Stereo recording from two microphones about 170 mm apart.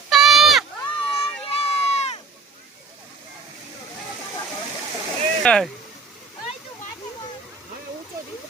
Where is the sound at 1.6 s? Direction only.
40° left (ahead or behind).